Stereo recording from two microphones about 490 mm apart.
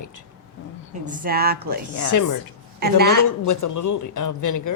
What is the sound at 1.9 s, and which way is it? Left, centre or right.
Speech, left.